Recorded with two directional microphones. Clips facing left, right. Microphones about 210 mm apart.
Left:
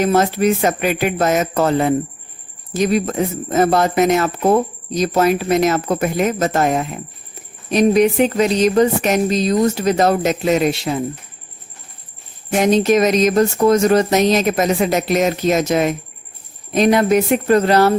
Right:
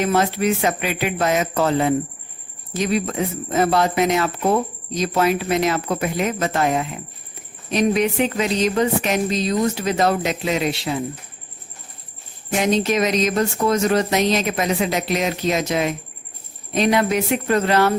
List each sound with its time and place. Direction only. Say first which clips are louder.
0.0 s speech: left 4 dB; 40° left (ahead or behind)
12.7 s speech: left 6 dB; 40° left (ahead or behind)